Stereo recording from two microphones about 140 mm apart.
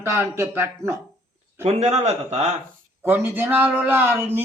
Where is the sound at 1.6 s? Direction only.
55° right (ahead or behind).